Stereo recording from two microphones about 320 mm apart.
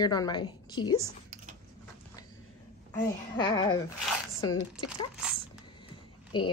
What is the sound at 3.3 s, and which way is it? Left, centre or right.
Speech, centre.